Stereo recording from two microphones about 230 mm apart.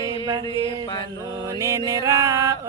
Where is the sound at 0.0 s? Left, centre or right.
Centre.